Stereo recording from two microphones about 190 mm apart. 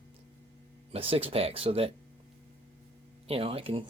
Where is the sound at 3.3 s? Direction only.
30° right (ahead or behind).